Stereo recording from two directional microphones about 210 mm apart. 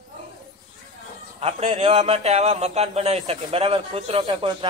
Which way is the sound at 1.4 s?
30° right (ahead or behind).